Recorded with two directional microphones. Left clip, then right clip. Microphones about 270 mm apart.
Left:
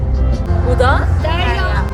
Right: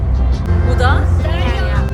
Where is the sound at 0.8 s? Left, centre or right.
Centre.